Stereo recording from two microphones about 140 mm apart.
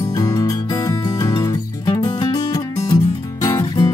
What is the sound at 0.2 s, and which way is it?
Music, 25° left (ahead or behind).